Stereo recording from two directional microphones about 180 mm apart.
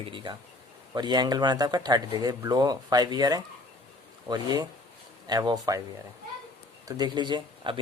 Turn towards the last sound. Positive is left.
turn(degrees=-25)  # may be behind; listen again after turning